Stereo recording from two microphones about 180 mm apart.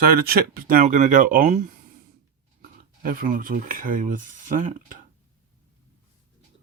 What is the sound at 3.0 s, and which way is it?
Speech, 50° right (ahead or behind).